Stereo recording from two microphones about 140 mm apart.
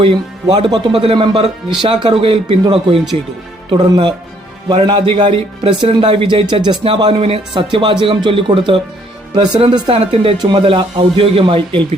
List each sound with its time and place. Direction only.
0.0 s speech: 40° right (ahead or behind)